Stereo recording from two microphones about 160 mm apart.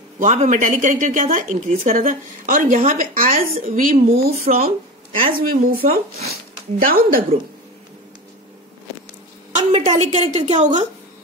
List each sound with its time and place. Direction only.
0.2 s speech: 50° right (ahead or behind)
9.6 s a woman's voice: 40° right (ahead or behind)